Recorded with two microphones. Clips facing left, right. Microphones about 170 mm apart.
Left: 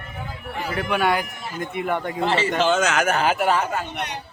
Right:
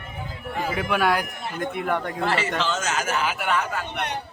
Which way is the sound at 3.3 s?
35° left (ahead or behind).